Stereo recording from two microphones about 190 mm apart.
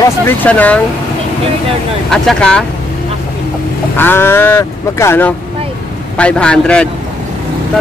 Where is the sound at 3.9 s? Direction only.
10° left (ahead or behind).